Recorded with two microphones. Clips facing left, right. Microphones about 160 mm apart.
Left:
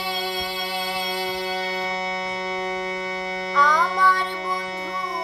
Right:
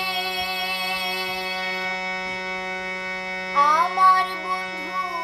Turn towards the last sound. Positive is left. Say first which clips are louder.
# even
turn(degrees=-15)  # may be behind; listen again after turning